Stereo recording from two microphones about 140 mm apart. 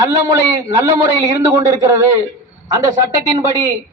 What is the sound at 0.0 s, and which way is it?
Speech, 25° right (ahead or behind).